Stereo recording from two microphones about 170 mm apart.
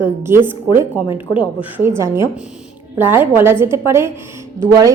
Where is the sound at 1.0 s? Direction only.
30° left (ahead or behind).